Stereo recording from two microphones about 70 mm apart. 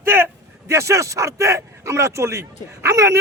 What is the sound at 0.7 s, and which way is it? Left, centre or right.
Speech, right.